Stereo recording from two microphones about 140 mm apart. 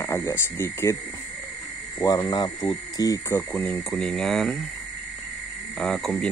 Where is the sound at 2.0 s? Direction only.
25° left (ahead or behind).